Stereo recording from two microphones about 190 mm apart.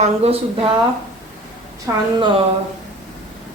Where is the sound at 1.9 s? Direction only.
15° right (ahead or behind).